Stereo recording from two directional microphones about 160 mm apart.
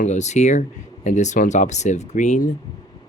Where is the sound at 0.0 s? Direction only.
45° left (ahead or behind).